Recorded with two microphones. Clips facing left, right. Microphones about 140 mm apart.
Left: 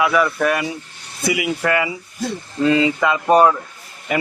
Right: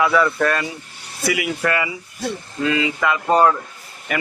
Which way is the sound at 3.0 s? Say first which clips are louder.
Left 3 dB; 20° left (ahead or behind).